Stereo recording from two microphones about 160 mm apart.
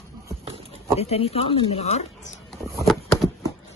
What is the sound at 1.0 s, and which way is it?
Speech, 40° left (ahead or behind).